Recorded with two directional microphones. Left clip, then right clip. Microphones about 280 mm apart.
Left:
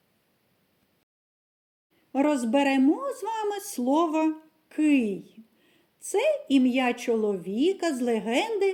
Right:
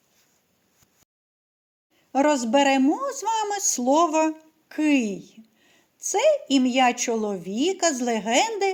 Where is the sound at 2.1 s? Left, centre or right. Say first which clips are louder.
Right 4 dB; centre.